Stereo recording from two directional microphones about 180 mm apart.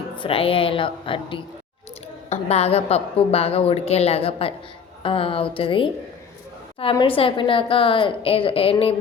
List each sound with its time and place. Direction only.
0.2 s a woman's voice: 30° left (ahead or behind)
6.9 s a woman's voice: 30° left (ahead or behind)